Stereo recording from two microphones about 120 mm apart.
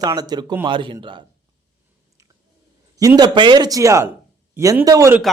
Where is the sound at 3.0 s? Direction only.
30° right (ahead or behind).